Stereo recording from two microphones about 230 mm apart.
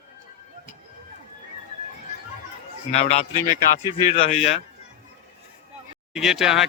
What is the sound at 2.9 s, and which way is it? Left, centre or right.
Speech, left.